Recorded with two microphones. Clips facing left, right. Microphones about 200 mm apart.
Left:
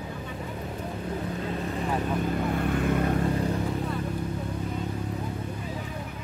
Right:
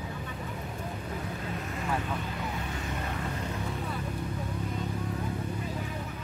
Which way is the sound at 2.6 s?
55° left (ahead or behind).